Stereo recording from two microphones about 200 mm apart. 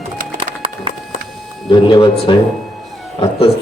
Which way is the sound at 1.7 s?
25° left (ahead or behind).